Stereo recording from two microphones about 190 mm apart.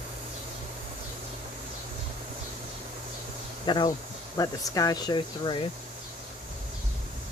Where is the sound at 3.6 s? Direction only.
25° left (ahead or behind).